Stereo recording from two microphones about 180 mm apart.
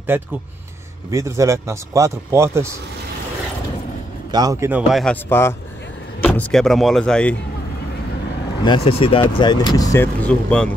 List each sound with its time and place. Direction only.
0.1 s speech: 10° right (ahead or behind)
4.3 s speech: 20° right (ahead or behind); by 5.1 s centre (ahead or behind)
5.1 s speech: 15° left (ahead or behind)
8.6 s speech: 30° left (ahead or behind)
10.2 s speech: 5° left (ahead or behind)